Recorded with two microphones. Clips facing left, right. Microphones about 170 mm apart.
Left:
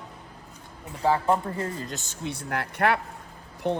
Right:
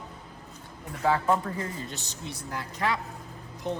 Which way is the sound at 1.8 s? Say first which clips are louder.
Left 3 dB; 40° left (ahead or behind).